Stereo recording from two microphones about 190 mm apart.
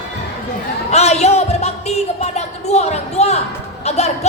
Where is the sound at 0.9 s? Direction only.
35° left (ahead or behind).